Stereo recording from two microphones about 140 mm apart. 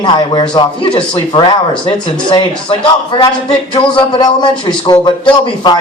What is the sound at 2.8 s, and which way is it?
A man's voice, 35° left (ahead or behind).